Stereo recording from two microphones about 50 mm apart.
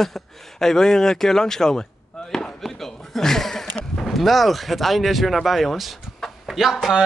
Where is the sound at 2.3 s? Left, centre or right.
Centre.